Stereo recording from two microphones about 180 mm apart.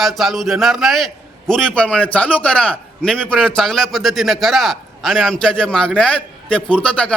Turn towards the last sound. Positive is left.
turn(degrees=5)  # may be behind; listen again after turning